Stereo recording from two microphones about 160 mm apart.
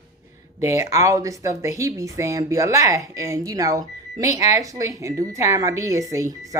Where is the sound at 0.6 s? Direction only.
20° right (ahead or behind).